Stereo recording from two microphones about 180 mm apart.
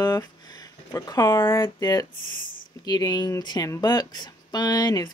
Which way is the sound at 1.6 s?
20° left (ahead or behind).